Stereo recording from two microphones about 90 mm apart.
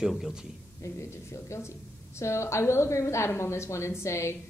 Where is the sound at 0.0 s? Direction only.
5° right (ahead or behind).